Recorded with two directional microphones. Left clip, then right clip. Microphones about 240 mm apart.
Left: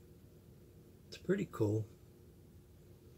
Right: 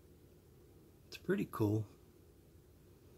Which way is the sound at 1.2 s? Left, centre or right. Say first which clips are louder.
Left 1 dB; right.